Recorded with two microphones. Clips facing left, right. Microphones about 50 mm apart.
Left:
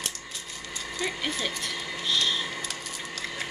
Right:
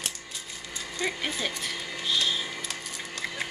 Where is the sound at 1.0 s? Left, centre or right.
Centre.